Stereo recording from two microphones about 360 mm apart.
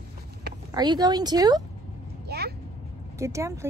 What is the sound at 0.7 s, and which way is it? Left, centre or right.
Speech, centre.